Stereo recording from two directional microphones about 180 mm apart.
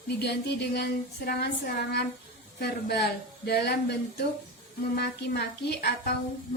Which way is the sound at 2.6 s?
65° left (ahead or behind).